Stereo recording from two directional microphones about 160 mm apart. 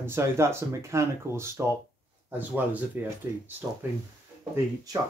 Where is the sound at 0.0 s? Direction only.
15° right (ahead or behind).